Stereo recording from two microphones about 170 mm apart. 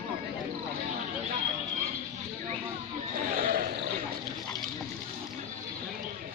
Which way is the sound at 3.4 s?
55° right (ahead or behind).